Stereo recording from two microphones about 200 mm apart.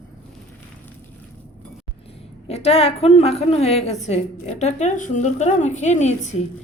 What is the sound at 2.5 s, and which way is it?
A woman's voice, 30° left (ahead or behind).